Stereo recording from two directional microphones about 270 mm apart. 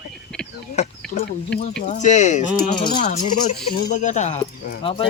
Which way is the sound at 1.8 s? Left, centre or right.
Left.